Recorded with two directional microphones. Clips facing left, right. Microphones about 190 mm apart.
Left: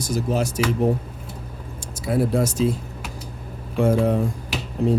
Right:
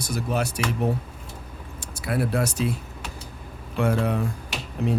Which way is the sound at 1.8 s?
65° right (ahead or behind).